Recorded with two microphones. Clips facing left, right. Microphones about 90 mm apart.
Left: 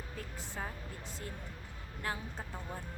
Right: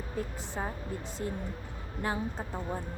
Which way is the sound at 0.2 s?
20° right (ahead or behind).